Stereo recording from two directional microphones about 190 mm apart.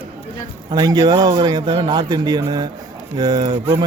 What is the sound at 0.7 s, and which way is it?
Speech, 20° right (ahead or behind).